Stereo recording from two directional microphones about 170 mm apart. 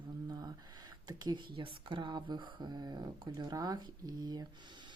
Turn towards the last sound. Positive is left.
turn(degrees=-25)  # may be behind; listen again after turning